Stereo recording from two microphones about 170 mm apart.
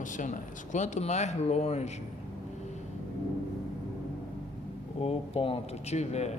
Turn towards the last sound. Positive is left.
turn(degrees=40)  # may be behind; listen again after turning